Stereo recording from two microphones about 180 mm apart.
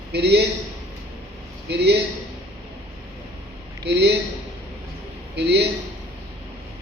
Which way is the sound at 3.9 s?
70° right (ahead or behind).